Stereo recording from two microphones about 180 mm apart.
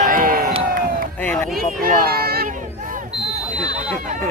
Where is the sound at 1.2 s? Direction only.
10° left (ahead or behind).